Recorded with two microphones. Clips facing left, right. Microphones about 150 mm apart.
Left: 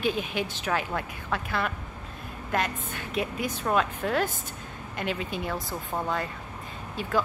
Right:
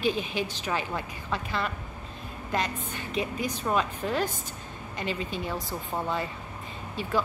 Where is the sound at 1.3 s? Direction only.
5° left (ahead or behind).